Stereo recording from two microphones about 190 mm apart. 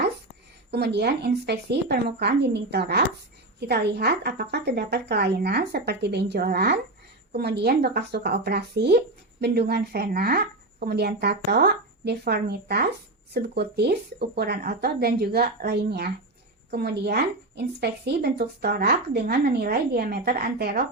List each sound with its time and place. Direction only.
0.7 s speech: 60° right (ahead or behind)